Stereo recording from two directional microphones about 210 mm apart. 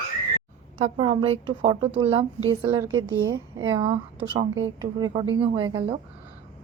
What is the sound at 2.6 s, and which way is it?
A woman's voice, 15° right (ahead or behind).